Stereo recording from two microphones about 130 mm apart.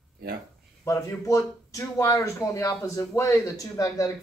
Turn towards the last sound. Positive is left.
turn(degrees=25)  # may be behind; listen again after turning